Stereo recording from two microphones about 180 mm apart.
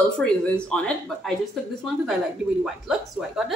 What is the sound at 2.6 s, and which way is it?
Speech, 5° right (ahead or behind).